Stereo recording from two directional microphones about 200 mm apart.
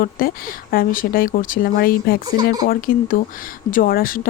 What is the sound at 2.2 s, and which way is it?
Speech, 20° right (ahead or behind).